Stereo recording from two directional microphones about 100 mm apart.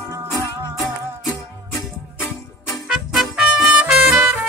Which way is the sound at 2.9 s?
5° right (ahead or behind).